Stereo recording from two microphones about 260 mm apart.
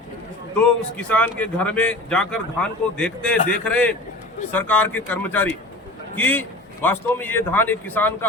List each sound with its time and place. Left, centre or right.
0.9 s a man's voice: centre